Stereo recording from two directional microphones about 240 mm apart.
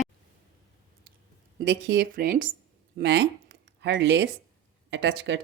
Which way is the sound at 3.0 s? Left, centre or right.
Right.